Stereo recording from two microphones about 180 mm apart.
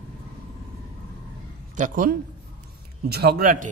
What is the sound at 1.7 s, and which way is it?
Speech, 45° right (ahead or behind).